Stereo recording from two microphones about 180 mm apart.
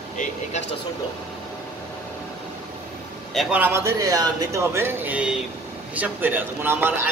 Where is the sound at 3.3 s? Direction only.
Centre (ahead or behind).